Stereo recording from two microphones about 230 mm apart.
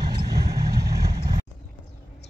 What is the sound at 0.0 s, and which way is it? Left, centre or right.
Vehicle, right.